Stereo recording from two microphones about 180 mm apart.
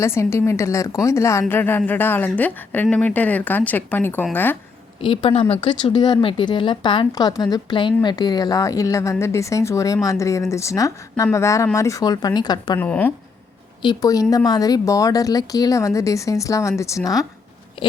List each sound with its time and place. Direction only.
0.0 s a woman's voice: 15° left (ahead or behind)
4.9 s a woman's voice: 30° left (ahead or behind)
12.8 s a woman's voice: 10° left (ahead or behind)
13.8 s speech: 20° left (ahead or behind)